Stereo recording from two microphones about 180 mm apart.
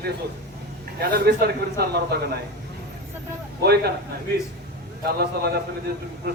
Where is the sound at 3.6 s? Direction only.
60° right (ahead or behind).